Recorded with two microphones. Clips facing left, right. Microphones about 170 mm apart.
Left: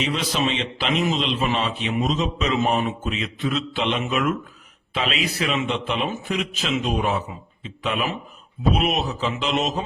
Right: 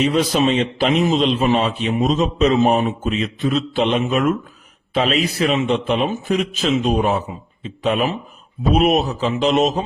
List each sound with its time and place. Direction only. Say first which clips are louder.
0.0 s a man's voice: right 7 dB; 45° right (ahead or behind)